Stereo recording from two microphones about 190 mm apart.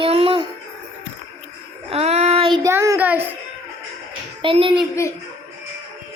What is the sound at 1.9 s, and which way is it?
Child singing, 35° right (ahead or behind).